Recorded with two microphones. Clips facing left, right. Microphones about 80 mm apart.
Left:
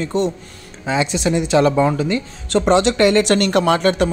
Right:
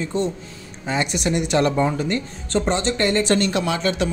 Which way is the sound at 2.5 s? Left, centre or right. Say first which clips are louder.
Left 6 dB; left.